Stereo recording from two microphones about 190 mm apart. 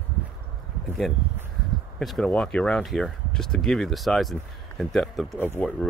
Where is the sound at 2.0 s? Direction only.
Centre (ahead or behind).